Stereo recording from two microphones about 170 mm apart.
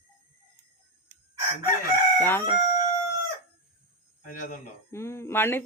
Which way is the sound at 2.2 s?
15° left (ahead or behind).